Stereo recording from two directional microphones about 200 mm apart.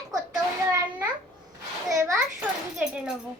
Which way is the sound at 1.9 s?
15° right (ahead or behind).